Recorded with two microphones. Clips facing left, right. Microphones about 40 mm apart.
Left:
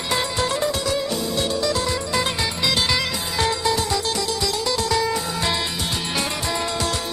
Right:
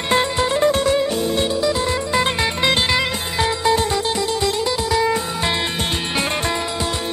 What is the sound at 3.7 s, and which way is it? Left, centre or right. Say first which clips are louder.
Music: right 4 dB; right.